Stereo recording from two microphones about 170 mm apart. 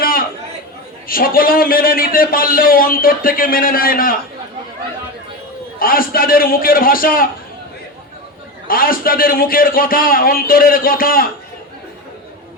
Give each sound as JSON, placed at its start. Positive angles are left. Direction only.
{"t": 0.0, "sound": "chatter", "side_deg": 55}
{"t": 1.0, "sound": "a man's voice", "side_deg": 60}
{"t": 5.8, "sound": "a man's voice", "side_deg": 60}
{"t": 8.6, "sound": "a man's voice", "side_deg": 60}